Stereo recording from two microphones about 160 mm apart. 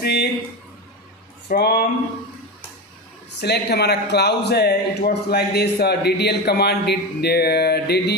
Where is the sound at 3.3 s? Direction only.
90° left.